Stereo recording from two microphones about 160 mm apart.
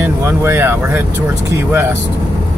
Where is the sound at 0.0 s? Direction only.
15° right (ahead or behind).